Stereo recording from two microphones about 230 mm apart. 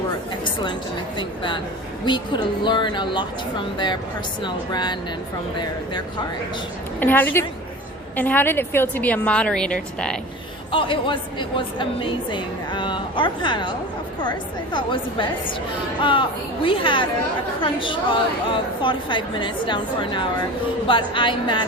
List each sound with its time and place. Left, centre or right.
0.4 s a woman's voice: centre
4.4 s a woman's voice: centre
7.0 s a woman's voice: centre
10.7 s a woman's voice: left